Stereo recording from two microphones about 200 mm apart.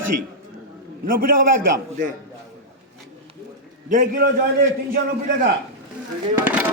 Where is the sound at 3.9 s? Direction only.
45° right (ahead or behind).